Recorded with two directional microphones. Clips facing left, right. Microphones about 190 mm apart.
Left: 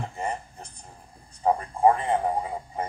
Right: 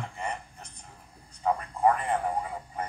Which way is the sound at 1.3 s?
30° left (ahead or behind).